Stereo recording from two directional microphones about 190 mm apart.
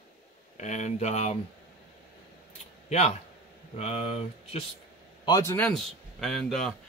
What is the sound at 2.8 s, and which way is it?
Speech, 35° left (ahead or behind).